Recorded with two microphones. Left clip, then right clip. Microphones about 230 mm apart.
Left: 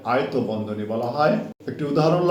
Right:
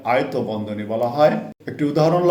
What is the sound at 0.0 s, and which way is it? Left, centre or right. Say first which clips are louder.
Speech: right 2 dB; right.